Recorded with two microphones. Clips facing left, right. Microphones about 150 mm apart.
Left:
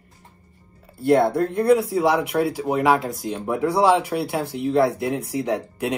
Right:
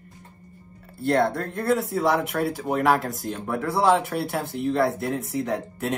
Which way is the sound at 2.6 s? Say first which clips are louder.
Even; centre (ahead or behind).